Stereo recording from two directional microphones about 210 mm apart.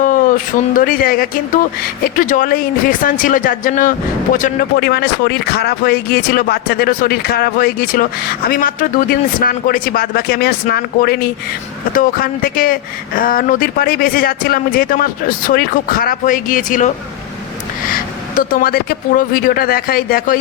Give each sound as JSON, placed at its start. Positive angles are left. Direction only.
{"t": 0.0, "sound": "speech", "side_deg": 40}
{"t": 18.3, "sound": "speech", "side_deg": 45}